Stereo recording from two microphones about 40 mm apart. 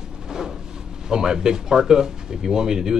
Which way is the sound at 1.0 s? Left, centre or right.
Centre.